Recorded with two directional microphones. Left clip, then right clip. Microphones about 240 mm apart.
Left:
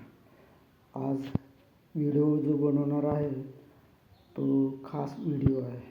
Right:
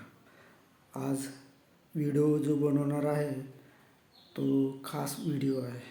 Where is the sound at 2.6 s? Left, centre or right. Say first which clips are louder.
Left 2 dB; right.